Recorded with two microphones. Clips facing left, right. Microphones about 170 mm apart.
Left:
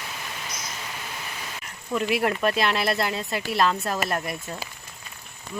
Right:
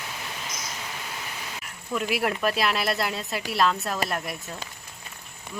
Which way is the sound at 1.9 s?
5° right (ahead or behind).